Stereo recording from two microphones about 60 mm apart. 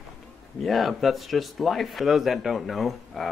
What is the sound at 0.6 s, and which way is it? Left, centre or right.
Speech, centre.